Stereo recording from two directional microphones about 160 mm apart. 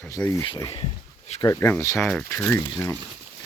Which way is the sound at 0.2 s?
15° left (ahead or behind).